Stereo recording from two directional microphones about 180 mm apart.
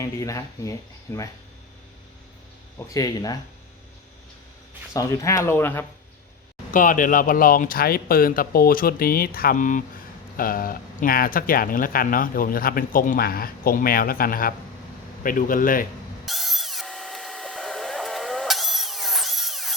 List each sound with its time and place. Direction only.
0.0 s speech: 15° left (ahead or behind)
2.7 s speech: 20° left (ahead or behind)
4.9 s speech: 15° left (ahead or behind)
6.7 s speech: 45° left (ahead or behind)
16.2 s a sound: centre (ahead or behind)